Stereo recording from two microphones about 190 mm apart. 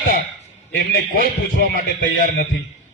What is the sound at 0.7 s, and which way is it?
A man's voice, 50° left (ahead or behind).